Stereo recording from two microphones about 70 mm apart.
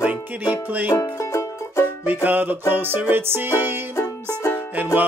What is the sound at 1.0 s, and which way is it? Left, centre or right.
Music, left.